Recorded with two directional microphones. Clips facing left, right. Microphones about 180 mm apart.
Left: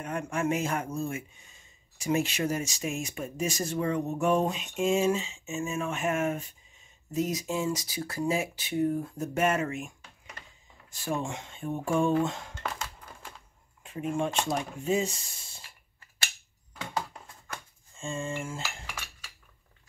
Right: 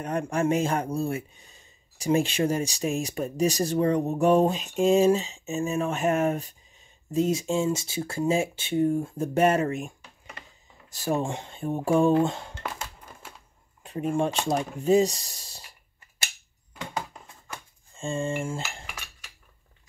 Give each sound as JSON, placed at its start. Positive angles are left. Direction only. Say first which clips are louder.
{"t": 0.0, "sound": "speech", "louder": "right 5 dB", "side_deg": -35}
{"t": 13.8, "sound": "speech", "louder": "right 4 dB", "side_deg": -35}
{"t": 17.9, "sound": "speech", "louder": "right 5 dB", "side_deg": -35}